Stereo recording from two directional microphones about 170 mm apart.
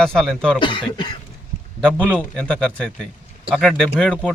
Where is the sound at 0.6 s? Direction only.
30° left (ahead or behind).